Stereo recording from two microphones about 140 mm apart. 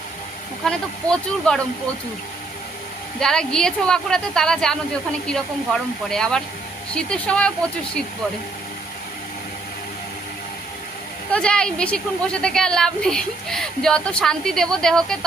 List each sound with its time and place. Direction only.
0.6 s a woman's voice: 5° left (ahead or behind)
3.2 s a woman's voice: 5° left (ahead or behind)
11.3 s a woman's voice: 5° left (ahead or behind)